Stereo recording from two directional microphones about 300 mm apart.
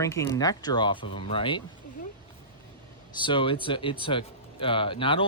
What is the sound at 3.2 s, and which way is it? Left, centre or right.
Speech, centre.